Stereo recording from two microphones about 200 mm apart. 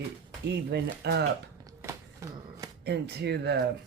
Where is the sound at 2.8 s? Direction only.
55° right (ahead or behind).